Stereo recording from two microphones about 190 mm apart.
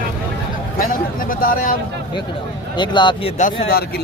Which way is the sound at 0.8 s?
50° left (ahead or behind).